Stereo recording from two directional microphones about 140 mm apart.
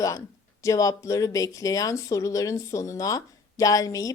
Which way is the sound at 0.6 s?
25° left (ahead or behind).